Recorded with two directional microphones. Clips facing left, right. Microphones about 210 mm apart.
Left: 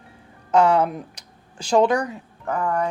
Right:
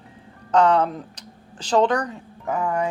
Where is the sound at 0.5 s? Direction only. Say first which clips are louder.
Even; 10° left (ahead or behind).